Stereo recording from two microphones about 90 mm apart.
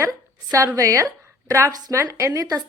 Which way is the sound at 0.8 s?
35° right (ahead or behind).